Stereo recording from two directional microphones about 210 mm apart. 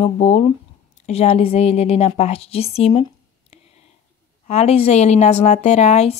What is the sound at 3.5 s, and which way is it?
Whispering, 30° left (ahead or behind).